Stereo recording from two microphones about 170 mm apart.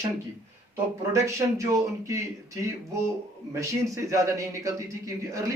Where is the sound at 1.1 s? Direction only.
20° right (ahead or behind).